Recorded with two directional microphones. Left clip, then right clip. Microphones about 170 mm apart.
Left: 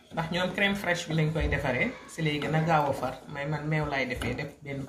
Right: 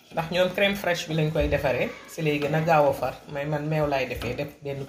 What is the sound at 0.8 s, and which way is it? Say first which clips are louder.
Speech: right 3 dB; 40° right (ahead or behind).